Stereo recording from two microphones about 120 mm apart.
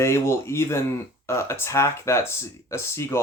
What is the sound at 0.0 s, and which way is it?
Speech, 20° left (ahead or behind).